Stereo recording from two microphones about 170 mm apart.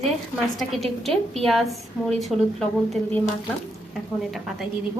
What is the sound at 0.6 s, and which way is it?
A woman's voice, centre (ahead or behind).